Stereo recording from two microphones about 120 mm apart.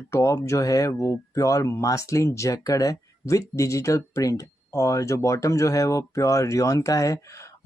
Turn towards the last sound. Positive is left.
turn(degrees=25)  # may be behind; listen again after turning